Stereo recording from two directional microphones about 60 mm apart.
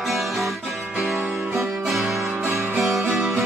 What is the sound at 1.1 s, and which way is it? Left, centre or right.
Music, right.